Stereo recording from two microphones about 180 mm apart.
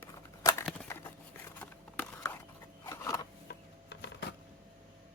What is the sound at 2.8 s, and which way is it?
Scissors, 15° left (ahead or behind).